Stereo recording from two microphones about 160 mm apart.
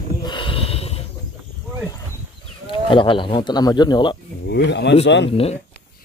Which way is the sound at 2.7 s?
30° left (ahead or behind).